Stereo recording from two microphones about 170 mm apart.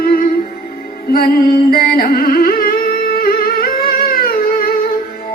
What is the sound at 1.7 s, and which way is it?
Music, 60° left (ahead or behind).